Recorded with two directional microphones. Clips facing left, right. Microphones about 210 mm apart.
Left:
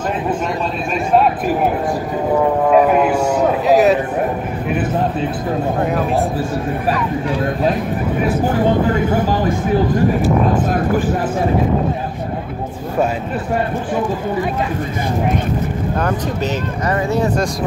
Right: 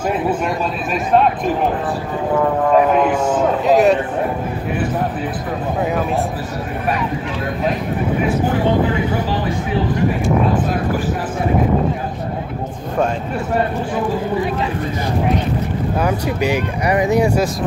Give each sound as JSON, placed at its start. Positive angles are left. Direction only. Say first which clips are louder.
{"t": 2.7, "sound": "a man's voice", "louder": "left 1 dB", "side_deg": 10}
{"t": 8.9, "sound": "speech", "louder": "left 3 dB", "side_deg": 45}
{"t": 16.0, "sound": "speech", "louder": "right 2 dB", "side_deg": -15}